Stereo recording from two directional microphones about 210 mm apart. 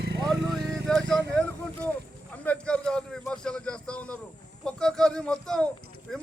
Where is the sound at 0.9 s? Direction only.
5° left (ahead or behind).